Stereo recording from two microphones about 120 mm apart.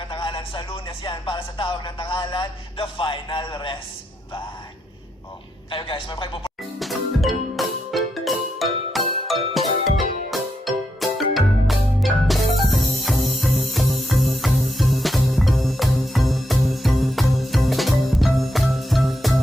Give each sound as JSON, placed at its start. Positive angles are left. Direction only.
{"t": 0.1, "sound": "speech", "side_deg": 45}
{"t": 5.7, "sound": "speech", "side_deg": 45}
{"t": 6.7, "sound": "music", "side_deg": 0}
{"t": 10.7, "sound": "music", "side_deg": 0}